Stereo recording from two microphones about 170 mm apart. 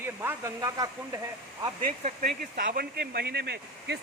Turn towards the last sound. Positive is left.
turn(degrees=-75)  # may be behind; listen again after turning